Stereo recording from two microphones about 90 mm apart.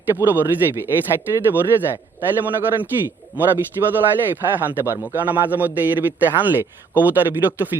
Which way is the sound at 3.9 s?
20° right (ahead or behind).